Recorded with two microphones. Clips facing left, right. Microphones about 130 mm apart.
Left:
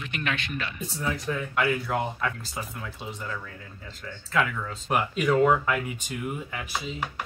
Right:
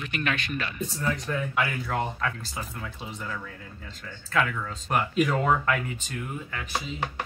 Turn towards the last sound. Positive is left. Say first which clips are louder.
# left 2 dB
turn(degrees=5)  # may be behind; listen again after turning